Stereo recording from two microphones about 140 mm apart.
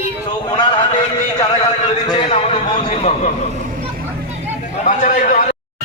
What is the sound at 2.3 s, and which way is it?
Speech, 45° left (ahead or behind).